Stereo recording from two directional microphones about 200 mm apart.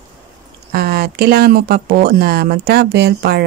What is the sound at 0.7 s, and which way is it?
Speech, 50° right (ahead or behind).